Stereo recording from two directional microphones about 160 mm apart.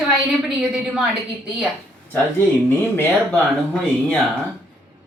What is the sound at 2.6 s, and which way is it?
Speech, 10° left (ahead or behind).